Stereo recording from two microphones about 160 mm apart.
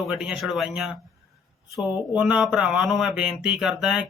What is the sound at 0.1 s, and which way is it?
Speech, 5° right (ahead or behind).